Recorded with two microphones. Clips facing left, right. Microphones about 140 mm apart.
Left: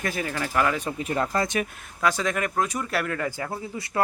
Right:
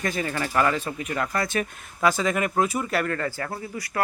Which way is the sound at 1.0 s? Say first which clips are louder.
Left 2 dB; 25° left (ahead or behind).